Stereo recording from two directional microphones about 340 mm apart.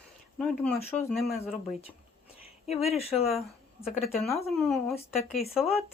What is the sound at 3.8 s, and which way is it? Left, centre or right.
Speech, centre.